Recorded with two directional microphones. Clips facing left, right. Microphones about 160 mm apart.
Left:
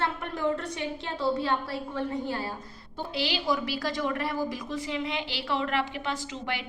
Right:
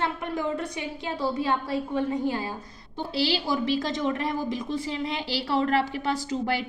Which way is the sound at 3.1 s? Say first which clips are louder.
Right 3 dB; 30° right (ahead or behind).